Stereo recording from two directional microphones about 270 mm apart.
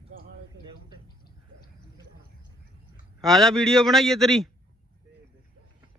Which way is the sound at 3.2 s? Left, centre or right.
Centre.